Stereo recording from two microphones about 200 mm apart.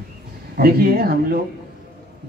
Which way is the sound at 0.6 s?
50° right (ahead or behind).